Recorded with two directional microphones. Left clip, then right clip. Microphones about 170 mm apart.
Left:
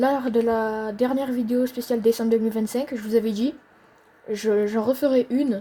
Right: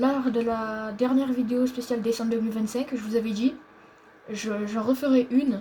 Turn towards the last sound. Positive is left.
turn(degrees=90)